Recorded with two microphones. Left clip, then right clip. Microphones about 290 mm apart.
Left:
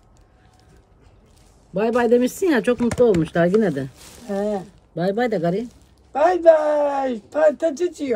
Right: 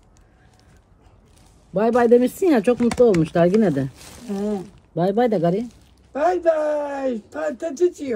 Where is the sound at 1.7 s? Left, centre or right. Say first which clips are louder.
Right 2 dB; centre.